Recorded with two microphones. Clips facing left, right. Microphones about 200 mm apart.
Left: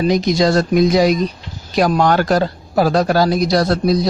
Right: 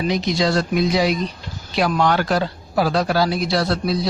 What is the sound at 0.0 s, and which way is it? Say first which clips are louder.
Speech: left 5 dB; 45° left (ahead or behind).